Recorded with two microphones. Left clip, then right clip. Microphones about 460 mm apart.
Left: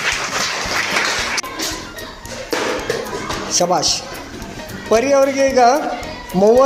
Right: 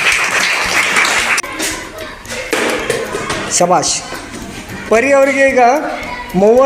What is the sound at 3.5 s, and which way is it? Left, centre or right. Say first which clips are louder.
Speech: right 5 dB; left.